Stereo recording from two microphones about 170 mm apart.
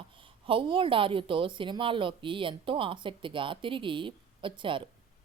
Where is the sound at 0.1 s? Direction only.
30° right (ahead or behind).